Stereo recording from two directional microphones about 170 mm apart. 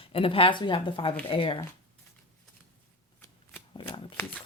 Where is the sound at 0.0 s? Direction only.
35° left (ahead or behind).